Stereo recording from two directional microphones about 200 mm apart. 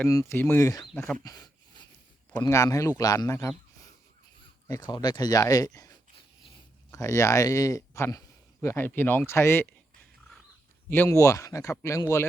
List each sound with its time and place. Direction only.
0.0 s speech: 15° left (ahead or behind)
1.2 s a sound: 20° left (ahead or behind)
2.4 s speech: 15° left (ahead or behind)
4.7 s speech: 20° left (ahead or behind)
10.8 s speech: 10° left (ahead or behind)